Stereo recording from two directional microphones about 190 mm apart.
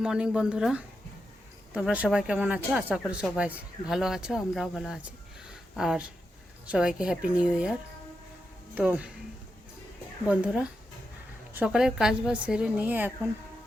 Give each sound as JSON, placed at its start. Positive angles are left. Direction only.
{"t": 0.0, "sound": "speech", "side_deg": -5}
{"t": 10.2, "sound": "speech", "side_deg": -5}